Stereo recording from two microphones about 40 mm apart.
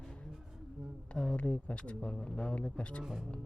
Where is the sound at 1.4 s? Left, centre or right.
Left.